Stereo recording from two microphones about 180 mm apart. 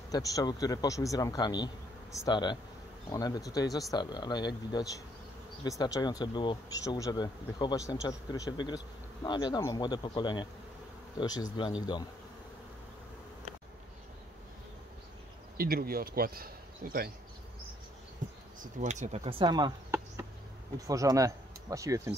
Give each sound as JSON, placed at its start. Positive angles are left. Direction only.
{"t": 0.1, "sound": "speech", "side_deg": 20}
{"t": 15.5, "sound": "speech", "side_deg": -55}
{"t": 18.6, "sound": "speech", "side_deg": -40}
{"t": 20.8, "sound": "speech", "side_deg": -20}